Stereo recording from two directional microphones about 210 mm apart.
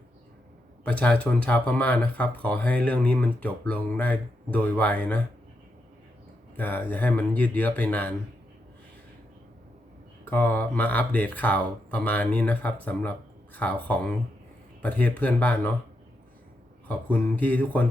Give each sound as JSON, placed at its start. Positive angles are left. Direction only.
{"t": 0.9, "sound": "speech", "side_deg": 5}
{"t": 6.6, "sound": "speech", "side_deg": 10}
{"t": 10.2, "sound": "speech", "side_deg": 10}
{"t": 17.1, "sound": "speech", "side_deg": 5}